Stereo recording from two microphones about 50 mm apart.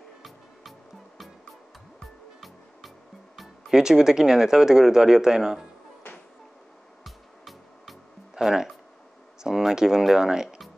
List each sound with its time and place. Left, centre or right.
0.2 s music: centre
3.7 s speech: centre
7.1 s music: centre
9.4 s speech: centre